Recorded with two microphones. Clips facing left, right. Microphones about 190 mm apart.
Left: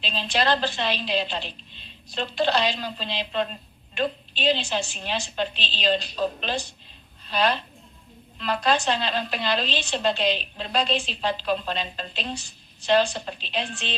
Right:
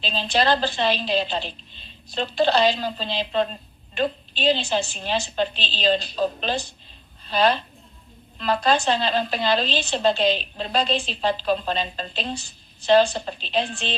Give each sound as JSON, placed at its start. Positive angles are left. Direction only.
{"t": 0.0, "sound": "a woman's voice", "side_deg": -35}